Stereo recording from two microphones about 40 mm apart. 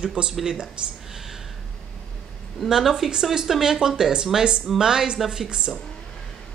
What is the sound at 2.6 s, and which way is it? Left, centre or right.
Speech, centre.